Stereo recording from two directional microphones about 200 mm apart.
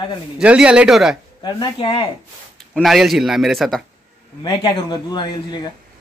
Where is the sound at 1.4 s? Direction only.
25° left (ahead or behind).